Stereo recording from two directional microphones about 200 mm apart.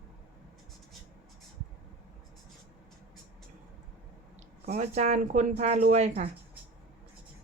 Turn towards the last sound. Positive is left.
turn(degrees=-35)  # may be behind; listen again after turning